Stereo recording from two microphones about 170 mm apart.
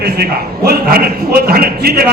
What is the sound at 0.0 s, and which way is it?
A man's voice, 70° right (ahead or behind).